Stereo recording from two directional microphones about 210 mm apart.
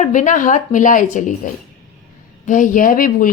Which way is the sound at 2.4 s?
40° left (ahead or behind).